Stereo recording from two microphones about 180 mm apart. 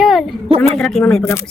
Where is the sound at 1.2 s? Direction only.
15° left (ahead or behind).